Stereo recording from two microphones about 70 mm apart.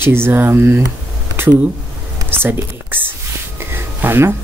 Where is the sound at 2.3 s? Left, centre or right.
Right.